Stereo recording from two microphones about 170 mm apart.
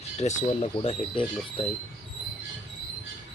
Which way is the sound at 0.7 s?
30° left (ahead or behind).